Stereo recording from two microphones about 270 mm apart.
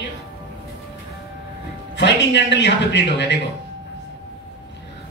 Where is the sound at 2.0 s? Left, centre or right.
Left.